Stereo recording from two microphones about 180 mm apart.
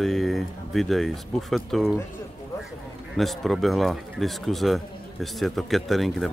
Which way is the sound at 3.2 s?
Centre (ahead or behind).